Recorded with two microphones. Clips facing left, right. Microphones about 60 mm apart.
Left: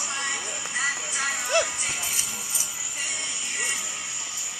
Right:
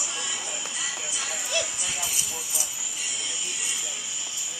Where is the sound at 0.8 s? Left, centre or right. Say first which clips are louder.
Left 10 dB; left.